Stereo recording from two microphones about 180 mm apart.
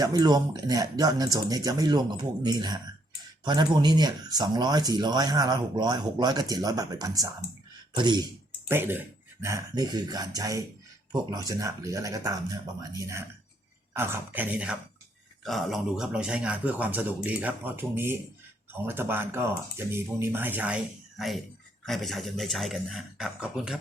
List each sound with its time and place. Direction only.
0.0 s speech: 20° right (ahead or behind)
8.6 s speech: 10° right (ahead or behind)
13.9 s a man's voice: 10° right (ahead or behind)